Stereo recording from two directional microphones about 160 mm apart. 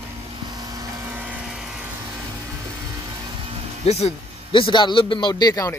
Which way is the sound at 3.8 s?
40° left (ahead or behind).